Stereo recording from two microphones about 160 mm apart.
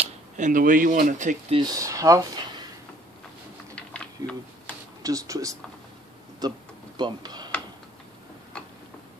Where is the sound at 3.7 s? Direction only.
5° left (ahead or behind).